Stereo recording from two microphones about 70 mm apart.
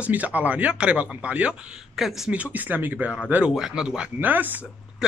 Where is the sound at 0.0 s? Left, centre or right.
Right.